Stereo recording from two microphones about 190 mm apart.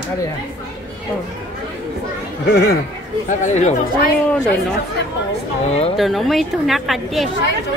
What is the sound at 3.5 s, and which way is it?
Speech, 35° left (ahead or behind).